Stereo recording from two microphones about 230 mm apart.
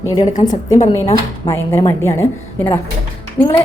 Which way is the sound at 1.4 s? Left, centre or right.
Centre.